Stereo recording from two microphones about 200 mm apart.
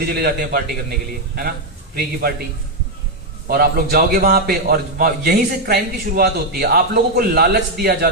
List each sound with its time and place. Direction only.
0.0 s a man's voice: 50° right (ahead or behind)
3.4 s a man's voice: 50° right (ahead or behind)